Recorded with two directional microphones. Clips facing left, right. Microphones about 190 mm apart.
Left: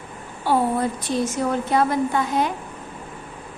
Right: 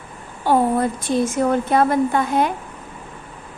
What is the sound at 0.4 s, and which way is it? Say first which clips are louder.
A woman's voice: right 3 dB; 50° right (ahead or behind).